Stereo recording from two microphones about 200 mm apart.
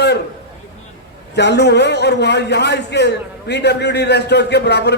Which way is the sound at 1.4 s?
55° left (ahead or behind).